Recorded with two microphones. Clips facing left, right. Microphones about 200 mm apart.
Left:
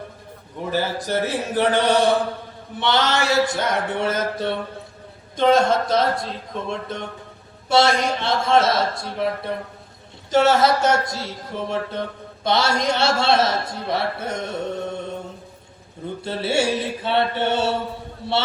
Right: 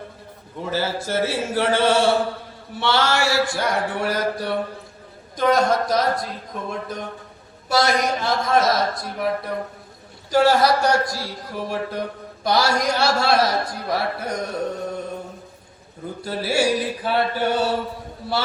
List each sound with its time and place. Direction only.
0.6 s speech: 15° left (ahead or behind)
16.2 s speech: 25° left (ahead or behind)